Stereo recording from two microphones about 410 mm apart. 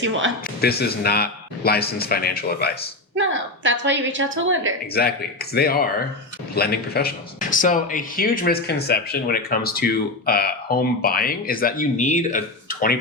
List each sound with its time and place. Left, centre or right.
0.0 s a woman's voice: right
0.6 s speech: left
3.2 s a woman's voice: right
5.0 s speech: left